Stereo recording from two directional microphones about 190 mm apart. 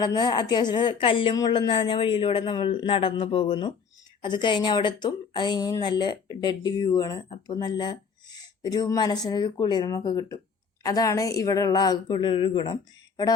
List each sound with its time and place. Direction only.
0.0 s speech: 20° left (ahead or behind)